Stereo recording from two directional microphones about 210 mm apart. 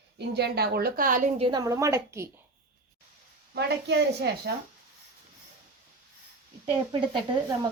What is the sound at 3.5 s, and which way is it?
Speech, 50° right (ahead or behind).